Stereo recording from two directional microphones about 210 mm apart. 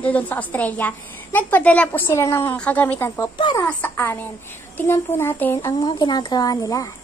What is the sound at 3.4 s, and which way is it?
Speech, 20° left (ahead or behind).